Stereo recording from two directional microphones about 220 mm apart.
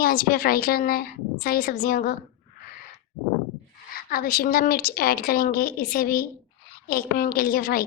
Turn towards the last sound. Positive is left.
turn(degrees=40)  # may be behind; listen again after turning